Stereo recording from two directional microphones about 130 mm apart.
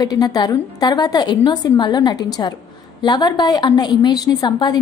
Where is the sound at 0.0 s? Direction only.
30° left (ahead or behind).